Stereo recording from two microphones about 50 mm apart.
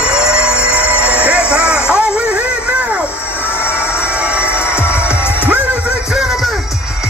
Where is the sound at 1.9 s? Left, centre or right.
Centre.